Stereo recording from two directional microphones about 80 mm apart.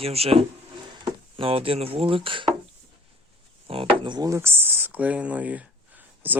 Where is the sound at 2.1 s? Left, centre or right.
Right.